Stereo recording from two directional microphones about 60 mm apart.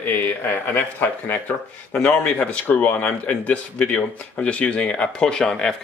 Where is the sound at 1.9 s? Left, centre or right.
Left.